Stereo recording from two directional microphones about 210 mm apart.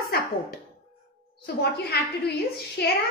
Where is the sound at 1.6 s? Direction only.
50° left (ahead or behind).